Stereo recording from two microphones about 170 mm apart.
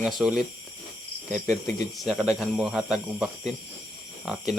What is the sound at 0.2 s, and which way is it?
Speech, 5° right (ahead or behind).